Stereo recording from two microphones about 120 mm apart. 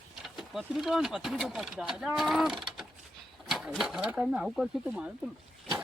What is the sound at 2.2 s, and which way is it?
Mechanisms, centre (ahead or behind).